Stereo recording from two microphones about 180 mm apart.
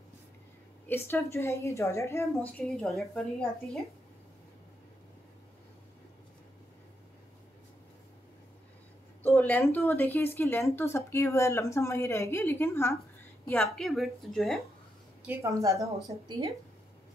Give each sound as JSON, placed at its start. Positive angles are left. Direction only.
{"t": 0.8, "sound": "speech", "side_deg": 10}
{"t": 2.8, "sound": "a woman's voice", "side_deg": 0}
{"t": 9.2, "sound": "a woman's voice", "side_deg": 10}
{"t": 15.2, "sound": "a woman's voice", "side_deg": -15}